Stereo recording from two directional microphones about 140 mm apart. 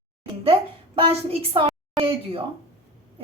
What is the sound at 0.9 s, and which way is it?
A woman's voice, 45° right (ahead or behind).